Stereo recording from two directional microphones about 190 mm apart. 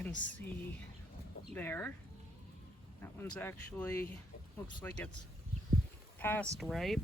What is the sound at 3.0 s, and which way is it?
Speech, 10° left (ahead or behind).